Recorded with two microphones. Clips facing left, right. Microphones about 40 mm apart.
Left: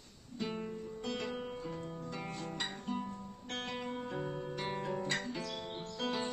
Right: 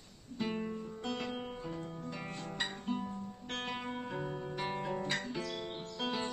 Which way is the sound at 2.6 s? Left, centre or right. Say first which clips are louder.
Right 3 dB; centre.